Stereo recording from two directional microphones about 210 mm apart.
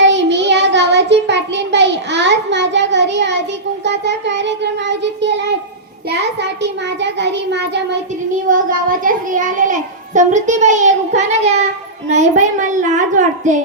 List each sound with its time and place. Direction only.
0.0 s child singing: 60° right (ahead or behind)
3.8 s a child's voice: 55° right (ahead or behind)
8.4 s a child's voice: 40° right (ahead or behind)